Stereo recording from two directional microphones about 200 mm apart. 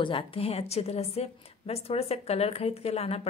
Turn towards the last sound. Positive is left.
turn(degrees=30)  # may be behind; listen again after turning